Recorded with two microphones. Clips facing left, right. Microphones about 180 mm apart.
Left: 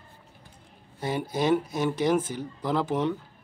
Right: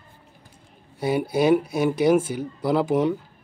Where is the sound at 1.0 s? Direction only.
10° right (ahead or behind).